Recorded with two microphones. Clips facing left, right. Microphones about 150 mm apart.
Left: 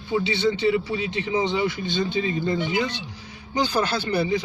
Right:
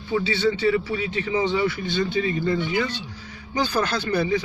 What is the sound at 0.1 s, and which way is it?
A man's voice, 20° left (ahead or behind).